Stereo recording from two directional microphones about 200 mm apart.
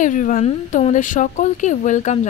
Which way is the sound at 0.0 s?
40° left (ahead or behind).